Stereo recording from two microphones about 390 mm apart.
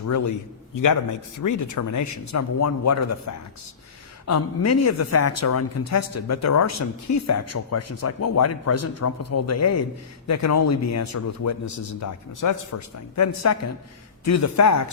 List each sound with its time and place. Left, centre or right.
0.1 s speech: left
1.4 s speech: left